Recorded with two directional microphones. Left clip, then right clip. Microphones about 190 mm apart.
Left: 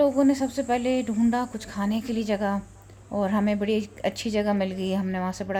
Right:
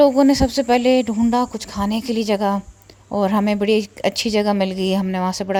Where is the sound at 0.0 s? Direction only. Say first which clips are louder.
Right 8 dB; 45° right (ahead or behind).